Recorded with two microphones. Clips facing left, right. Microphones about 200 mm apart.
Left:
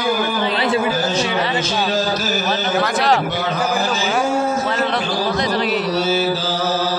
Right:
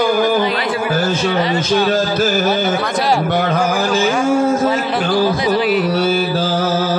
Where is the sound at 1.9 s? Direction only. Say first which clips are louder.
Right 4 dB; 55° right (ahead or behind).